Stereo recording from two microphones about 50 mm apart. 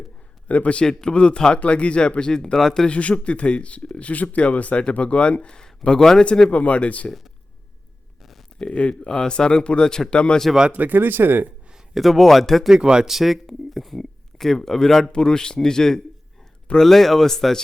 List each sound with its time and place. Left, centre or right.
0.4 s a man's voice: left; by 2.9 s centre
2.9 s a man's voice: left
6.5 s speech: left
8.2 s a sound: centre
8.5 s speech: left
10.7 s speech: right
11.9 s speech: centre
12.7 s speech: centre
13.1 s speech: centre